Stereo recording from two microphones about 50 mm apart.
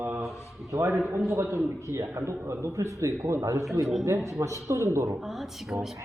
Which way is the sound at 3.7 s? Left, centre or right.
Centre.